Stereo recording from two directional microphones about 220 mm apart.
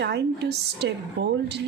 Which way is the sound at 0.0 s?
50° right (ahead or behind).